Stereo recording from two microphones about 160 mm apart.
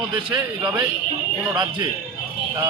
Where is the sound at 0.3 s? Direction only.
20° right (ahead or behind).